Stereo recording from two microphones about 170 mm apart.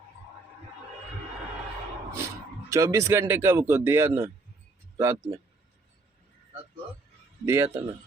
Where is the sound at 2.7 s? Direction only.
15° right (ahead or behind).